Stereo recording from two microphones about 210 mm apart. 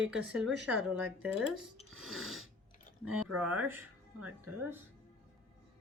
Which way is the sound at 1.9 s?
Centre (ahead or behind).